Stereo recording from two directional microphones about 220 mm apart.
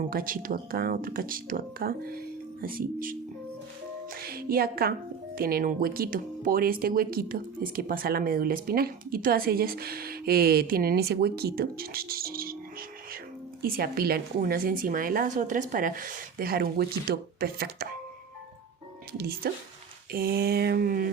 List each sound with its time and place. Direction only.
0.1 s a woman's voice: 40° right (ahead or behind)
13.6 s a woman's voice: 45° right (ahead or behind)
19.1 s speech: 45° right (ahead or behind)